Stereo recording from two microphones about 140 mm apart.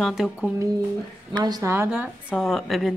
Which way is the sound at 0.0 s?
5° right (ahead or behind).